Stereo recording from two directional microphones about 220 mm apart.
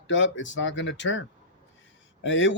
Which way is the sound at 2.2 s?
55° left (ahead or behind).